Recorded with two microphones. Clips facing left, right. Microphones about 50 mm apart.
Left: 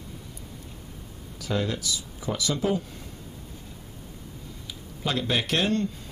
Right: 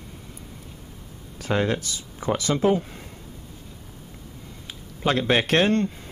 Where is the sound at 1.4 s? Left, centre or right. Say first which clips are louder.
Right 5 dB; right.